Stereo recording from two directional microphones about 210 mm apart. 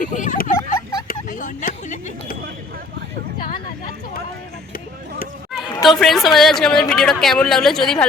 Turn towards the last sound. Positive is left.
turn(degrees=0)  # may be behind; listen again after turning